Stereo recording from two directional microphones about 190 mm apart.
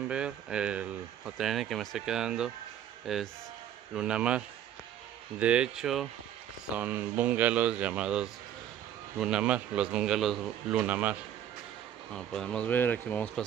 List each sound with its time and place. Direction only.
0.1 s speech: 5° right (ahead or behind)
5.4 s speech: 5° right (ahead or behind)
12.1 s speech: 5° left (ahead or behind)